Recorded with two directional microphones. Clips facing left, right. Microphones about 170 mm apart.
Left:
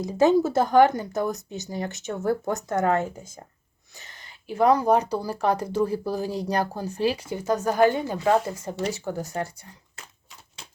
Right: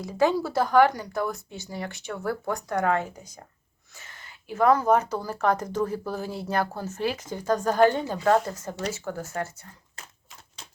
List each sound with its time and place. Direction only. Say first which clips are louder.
0.0 s a woman's voice: left 3 dB; 20° left (ahead or behind)
0.3 s speech: left 6 dB; 50° left (ahead or behind)
0.6 s a woman's voice: right 1 dB; 20° left (ahead or behind)
1.7 s speech: left 3 dB; 45° left (ahead or behind)
2.0 s a woman's voice: left 4 dB; 25° left (ahead or behind)
4.5 s speech: left 1 dB; 15° left (ahead or behind)
9.2 s speech: left 2 dB; 30° left (ahead or behind)